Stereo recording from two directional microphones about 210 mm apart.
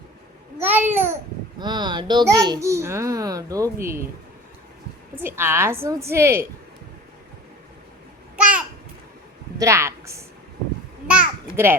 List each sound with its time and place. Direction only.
0.6 s babbling: 10° right (ahead or behind)
1.5 s a child's voice: 20° right (ahead or behind)
5.2 s a child's voice: 10° right (ahead or behind)
9.6 s a woman's voice: 15° right (ahead or behind)
11.1 s babbling: 10° right (ahead or behind)